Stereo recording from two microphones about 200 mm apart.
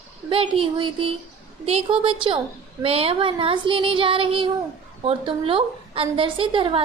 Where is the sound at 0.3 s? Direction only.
25° right (ahead or behind).